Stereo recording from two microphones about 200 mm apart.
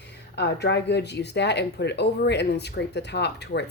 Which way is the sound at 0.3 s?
55° left (ahead or behind).